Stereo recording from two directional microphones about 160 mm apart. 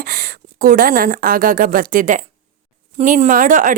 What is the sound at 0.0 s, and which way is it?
A woman's voice, 65° right (ahead or behind).